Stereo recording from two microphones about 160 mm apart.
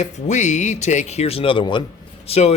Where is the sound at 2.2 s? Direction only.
40° left (ahead or behind).